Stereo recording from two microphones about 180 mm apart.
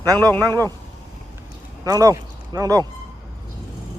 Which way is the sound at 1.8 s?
20° right (ahead or behind).